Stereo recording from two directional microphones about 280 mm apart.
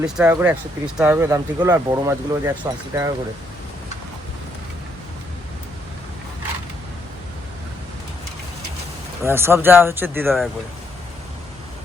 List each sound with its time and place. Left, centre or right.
0.0 s speech: centre
9.2 s speech: centre